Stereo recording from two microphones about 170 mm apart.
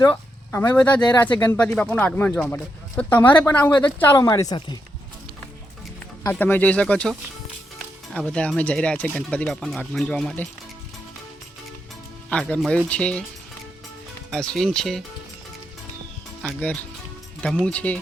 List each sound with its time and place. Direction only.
0.1 s speech: 10° left (ahead or behind); by 4.8 s 25° left (ahead or behind)
6.2 s speech: 10° left (ahead or behind)
12.3 s speech: 5° left (ahead or behind)
14.3 s speech: centre (ahead or behind)
16.4 s speech: 5° left (ahead or behind)